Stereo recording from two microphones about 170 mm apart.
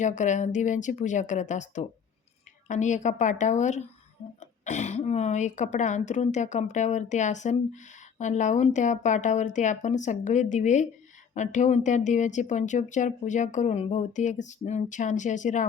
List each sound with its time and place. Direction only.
0.0 s speech: 45° left (ahead or behind)